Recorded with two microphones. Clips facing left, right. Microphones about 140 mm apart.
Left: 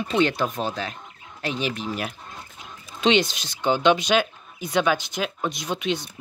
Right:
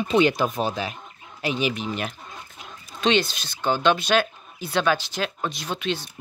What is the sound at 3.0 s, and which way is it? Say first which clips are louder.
Speech: left 1 dB; 20° left (ahead or behind).